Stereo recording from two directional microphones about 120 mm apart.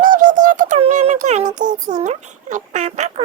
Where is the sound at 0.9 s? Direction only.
85° right.